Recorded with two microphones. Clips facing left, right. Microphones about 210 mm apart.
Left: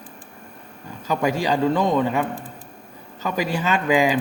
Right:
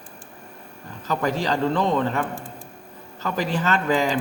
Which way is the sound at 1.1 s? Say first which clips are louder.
Left 2 dB; 10° left (ahead or behind).